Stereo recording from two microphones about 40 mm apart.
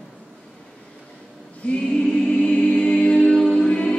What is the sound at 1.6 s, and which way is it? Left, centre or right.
Choir, left.